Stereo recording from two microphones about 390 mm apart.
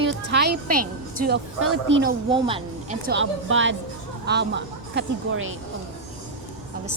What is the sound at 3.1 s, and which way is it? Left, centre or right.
A woman's voice, right.